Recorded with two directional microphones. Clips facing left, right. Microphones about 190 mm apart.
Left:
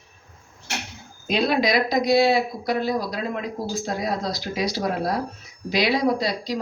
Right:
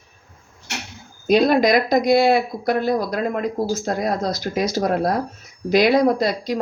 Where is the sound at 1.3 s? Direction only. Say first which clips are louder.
Right 6 dB; 45° right (ahead or behind).